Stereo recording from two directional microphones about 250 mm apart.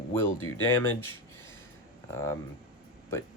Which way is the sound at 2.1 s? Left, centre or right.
Centre.